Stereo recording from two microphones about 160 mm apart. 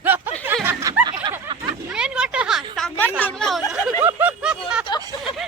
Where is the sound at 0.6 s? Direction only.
15° right (ahead or behind).